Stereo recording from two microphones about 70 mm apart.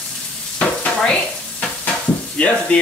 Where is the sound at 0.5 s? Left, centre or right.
Centre.